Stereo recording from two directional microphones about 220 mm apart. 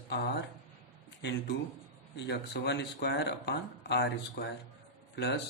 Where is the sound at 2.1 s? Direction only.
50° left (ahead or behind).